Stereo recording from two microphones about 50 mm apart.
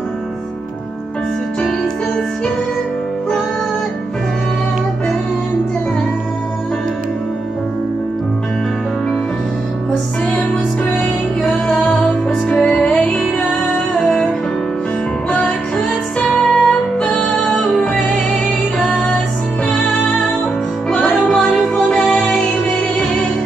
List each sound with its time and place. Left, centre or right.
11.7 s music: centre
16.3 s music: centre
20.9 s music: centre